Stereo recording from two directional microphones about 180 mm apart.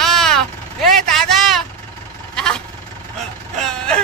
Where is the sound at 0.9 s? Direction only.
Centre (ahead or behind).